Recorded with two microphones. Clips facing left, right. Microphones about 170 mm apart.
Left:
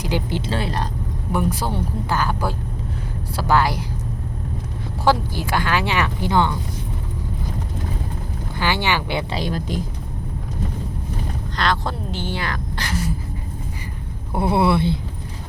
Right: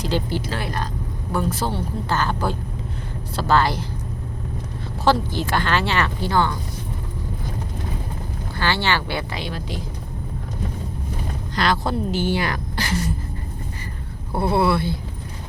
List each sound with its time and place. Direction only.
0.0 s speech: 15° left (ahead or behind)
1.3 s speech: 15° left (ahead or behind)
5.0 s speech: 10° left (ahead or behind)
8.5 s speech: 15° left (ahead or behind)
9.3 s speech: 40° left (ahead or behind)
11.5 s speech: 5° right (ahead or behind)
14.3 s speech: 15° left (ahead or behind)